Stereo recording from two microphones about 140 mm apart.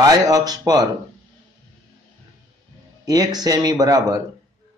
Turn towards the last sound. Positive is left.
turn(degrees=-25)  # may be behind; listen again after turning